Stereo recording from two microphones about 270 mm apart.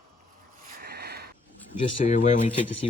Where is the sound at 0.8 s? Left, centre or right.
Right.